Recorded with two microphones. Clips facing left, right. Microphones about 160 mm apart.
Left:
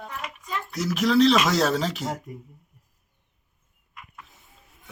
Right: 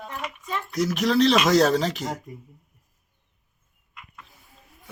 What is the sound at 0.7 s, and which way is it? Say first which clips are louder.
Speech: left 1 dB; centre (ahead or behind).